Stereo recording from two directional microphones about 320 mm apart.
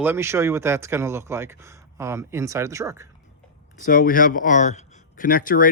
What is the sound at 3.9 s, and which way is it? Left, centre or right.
Speech, left.